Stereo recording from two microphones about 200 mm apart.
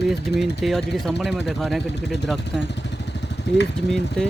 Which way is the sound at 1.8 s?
55° left (ahead or behind).